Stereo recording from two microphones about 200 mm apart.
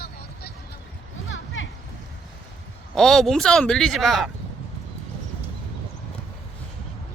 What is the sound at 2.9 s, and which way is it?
Speech, centre (ahead or behind).